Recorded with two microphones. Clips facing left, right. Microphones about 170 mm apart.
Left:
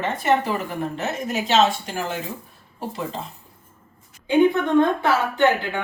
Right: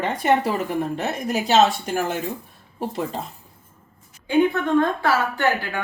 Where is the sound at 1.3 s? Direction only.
40° right (ahead or behind).